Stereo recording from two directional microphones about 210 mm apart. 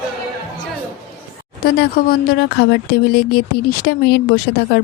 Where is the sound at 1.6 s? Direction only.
45° left (ahead or behind).